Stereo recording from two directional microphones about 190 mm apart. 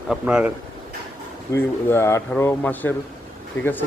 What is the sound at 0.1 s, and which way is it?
Speech, 5° right (ahead or behind).